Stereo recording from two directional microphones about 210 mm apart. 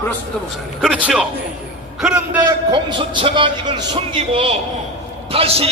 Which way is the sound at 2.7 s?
20° right (ahead or behind).